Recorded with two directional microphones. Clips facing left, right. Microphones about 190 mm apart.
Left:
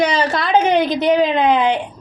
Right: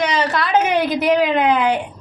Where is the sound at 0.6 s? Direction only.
5° right (ahead or behind).